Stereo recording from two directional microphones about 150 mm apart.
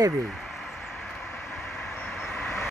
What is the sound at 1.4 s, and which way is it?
Vehicle, centre (ahead or behind).